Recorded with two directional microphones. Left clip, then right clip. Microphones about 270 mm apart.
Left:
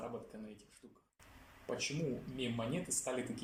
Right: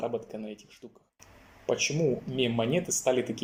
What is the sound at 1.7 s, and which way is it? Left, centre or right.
Speech, right.